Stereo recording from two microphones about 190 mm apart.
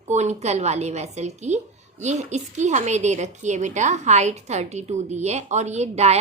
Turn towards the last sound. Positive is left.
turn(degrees=-35)  # may be behind; listen again after turning